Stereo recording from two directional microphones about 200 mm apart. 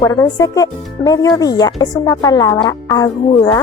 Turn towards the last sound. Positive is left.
turn(degrees=20)  # may be behind; listen again after turning